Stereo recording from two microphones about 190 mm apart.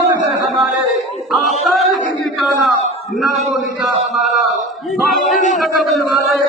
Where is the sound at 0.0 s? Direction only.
15° right (ahead or behind).